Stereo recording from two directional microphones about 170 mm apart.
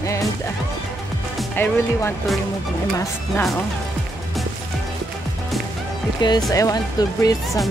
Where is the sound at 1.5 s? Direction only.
15° left (ahead or behind).